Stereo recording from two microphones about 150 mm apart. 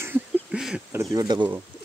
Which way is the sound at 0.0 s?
10° right (ahead or behind).